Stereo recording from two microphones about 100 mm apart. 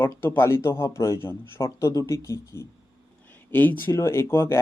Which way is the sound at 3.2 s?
15° left (ahead or behind).